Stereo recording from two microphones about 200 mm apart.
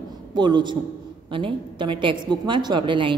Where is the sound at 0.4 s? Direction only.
20° right (ahead or behind).